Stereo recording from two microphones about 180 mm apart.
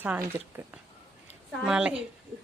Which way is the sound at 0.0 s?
10° right (ahead or behind).